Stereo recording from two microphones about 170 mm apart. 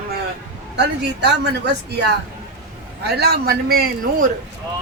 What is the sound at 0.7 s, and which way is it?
A woman's voice, 80° right.